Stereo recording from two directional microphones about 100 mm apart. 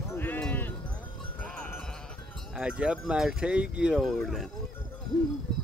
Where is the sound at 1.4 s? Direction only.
15° left (ahead or behind).